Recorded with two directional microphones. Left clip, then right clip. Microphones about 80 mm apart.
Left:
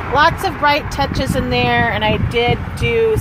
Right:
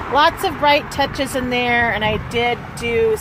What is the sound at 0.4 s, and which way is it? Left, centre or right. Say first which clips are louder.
Speech: even; right.